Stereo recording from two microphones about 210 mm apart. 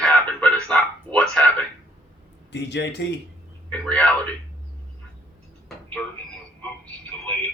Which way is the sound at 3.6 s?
5° left (ahead or behind).